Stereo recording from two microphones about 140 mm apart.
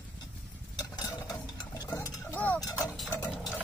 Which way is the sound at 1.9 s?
15° left (ahead or behind).